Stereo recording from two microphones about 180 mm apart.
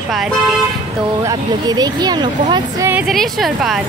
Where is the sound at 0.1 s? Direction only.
Centre (ahead or behind).